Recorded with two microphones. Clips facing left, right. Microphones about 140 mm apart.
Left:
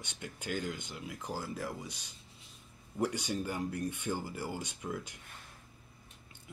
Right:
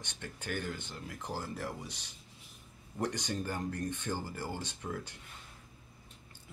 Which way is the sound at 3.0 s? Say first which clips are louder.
Left 2 dB; 10° left (ahead or behind).